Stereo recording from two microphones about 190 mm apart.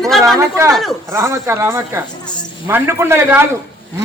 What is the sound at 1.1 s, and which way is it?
A man's voice, 15° right (ahead or behind).